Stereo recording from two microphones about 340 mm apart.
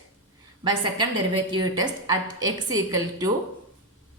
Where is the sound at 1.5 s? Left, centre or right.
Centre.